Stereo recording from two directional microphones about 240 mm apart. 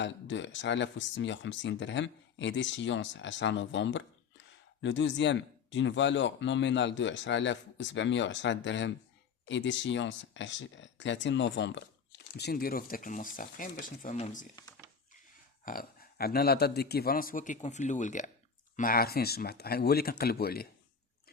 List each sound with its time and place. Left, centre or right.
0.0 s speech: left
15.6 s speech: left